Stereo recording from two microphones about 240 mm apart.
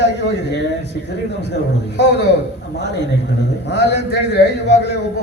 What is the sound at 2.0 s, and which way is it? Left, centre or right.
A man's voice, left.